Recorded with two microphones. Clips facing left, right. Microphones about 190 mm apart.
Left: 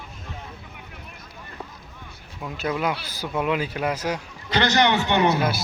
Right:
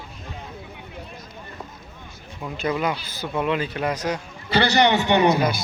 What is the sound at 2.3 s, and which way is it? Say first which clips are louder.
Speech: right 2 dB; centre (ahead or behind).